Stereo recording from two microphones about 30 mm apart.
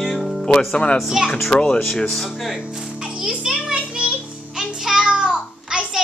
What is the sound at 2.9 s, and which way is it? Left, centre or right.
Music, right.